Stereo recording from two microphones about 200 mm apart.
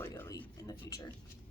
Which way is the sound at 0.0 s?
15° left (ahead or behind).